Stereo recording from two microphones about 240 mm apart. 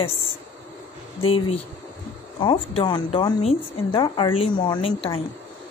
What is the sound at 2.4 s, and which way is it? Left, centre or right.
A woman's voice, left.